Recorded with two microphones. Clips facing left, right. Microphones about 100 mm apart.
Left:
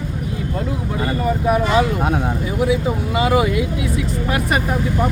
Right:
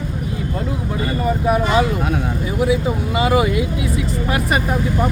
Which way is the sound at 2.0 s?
30° left (ahead or behind).